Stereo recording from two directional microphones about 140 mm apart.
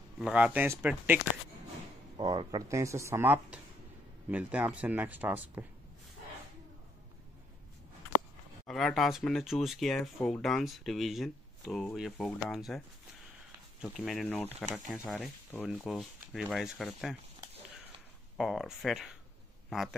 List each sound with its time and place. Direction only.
0.2 s speech: 10° right (ahead or behind)
2.1 s speech: 30° right (ahead or behind); by 5.7 s 10° right (ahead or behind)
8.6 s speech: centre (ahead or behind)
18.4 s speech: centre (ahead or behind)